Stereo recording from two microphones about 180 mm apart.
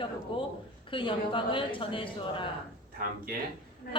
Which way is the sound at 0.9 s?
30° left (ahead or behind).